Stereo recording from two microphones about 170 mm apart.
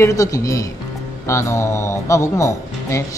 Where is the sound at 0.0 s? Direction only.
20° left (ahead or behind).